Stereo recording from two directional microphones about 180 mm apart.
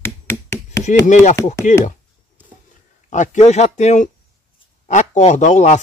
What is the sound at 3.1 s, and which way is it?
Speech, 45° left (ahead or behind).